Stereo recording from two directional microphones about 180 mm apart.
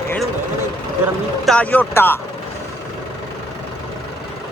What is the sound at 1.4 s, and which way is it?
Speech, 5° left (ahead or behind).